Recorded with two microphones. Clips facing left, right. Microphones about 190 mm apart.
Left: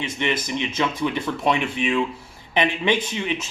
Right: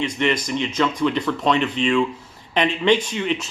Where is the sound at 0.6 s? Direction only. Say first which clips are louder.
Right 4 dB; 15° left (ahead or behind).